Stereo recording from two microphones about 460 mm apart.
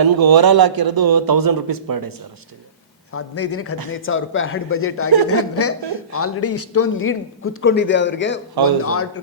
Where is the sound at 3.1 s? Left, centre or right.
Left.